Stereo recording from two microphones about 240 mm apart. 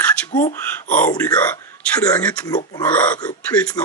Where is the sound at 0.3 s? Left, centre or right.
Left.